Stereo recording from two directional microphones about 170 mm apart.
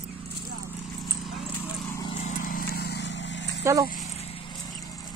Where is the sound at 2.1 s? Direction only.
40° left (ahead or behind); by 3.5 s 90° left.